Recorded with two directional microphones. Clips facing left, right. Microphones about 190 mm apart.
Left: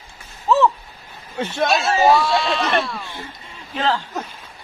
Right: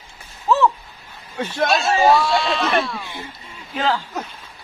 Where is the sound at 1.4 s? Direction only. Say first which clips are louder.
Even; 25° left (ahead or behind).